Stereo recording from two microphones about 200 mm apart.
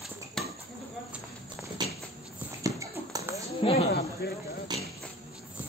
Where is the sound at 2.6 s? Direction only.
15° right (ahead or behind).